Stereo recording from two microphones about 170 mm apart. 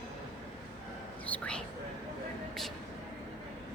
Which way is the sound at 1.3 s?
10° left (ahead or behind).